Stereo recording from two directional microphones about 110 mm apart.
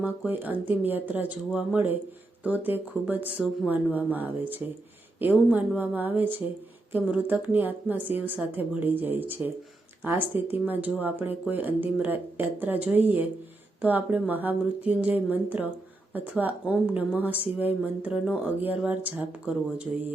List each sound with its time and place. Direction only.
0.0 s speech: 15° right (ahead or behind)